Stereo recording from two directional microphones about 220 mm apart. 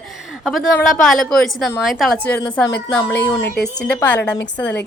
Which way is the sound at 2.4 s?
15° left (ahead or behind).